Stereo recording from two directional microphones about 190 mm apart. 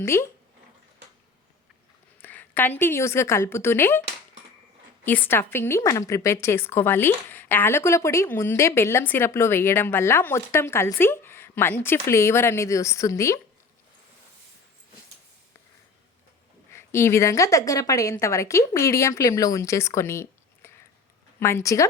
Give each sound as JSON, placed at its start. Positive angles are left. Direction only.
{"t": 0.0, "sound": "a woman's voice", "side_deg": 15}
{"t": 2.2, "sound": "a woman's voice", "side_deg": 10}
{"t": 5.0, "sound": "a woman's voice", "side_deg": 10}
{"t": 16.7, "sound": "a woman's voice", "side_deg": 15}